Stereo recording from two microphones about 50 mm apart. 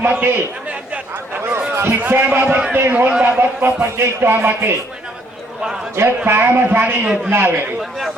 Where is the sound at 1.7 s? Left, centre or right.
Right.